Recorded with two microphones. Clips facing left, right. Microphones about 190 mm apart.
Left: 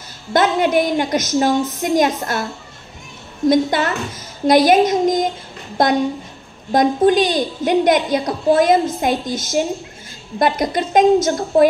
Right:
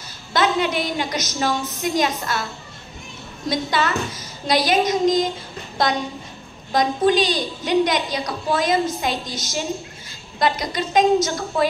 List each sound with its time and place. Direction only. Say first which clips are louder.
0.3 s a woman's voice: left 5 dB; 50° left (ahead or behind)
3.4 s a woman's voice: left 7 dB; 50° left (ahead or behind)